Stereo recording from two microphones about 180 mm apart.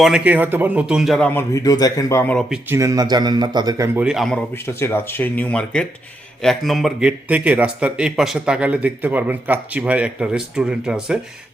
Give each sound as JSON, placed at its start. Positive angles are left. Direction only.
{"t": 0.0, "sound": "speech", "side_deg": -5}
{"t": 2.6, "sound": "a man's voice", "side_deg": -15}
{"t": 4.5, "sound": "a man's voice", "side_deg": 15}